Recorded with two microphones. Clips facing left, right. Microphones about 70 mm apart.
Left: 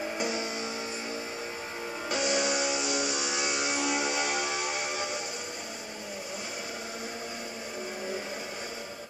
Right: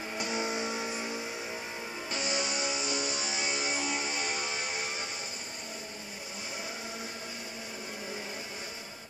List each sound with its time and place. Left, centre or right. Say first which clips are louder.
0.3 s music: right 1 dB; right
2.0 s music: left 6 dB; left